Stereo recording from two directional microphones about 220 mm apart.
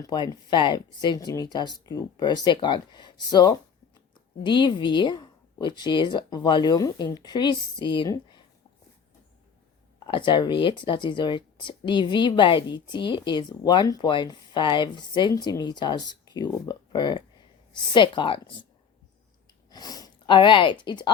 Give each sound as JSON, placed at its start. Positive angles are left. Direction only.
{"t": 0.0, "sound": "speech", "side_deg": 15}
{"t": 10.1, "sound": "speech", "side_deg": 20}
{"t": 19.7, "sound": "speech", "side_deg": 15}